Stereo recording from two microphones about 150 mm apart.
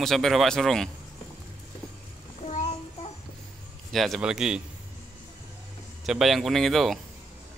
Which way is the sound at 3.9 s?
Centre (ahead or behind).